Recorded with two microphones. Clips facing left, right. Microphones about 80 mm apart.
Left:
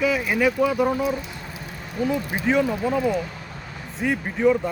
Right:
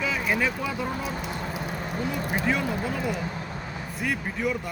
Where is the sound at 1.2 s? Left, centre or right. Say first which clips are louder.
Right 5 dB; right.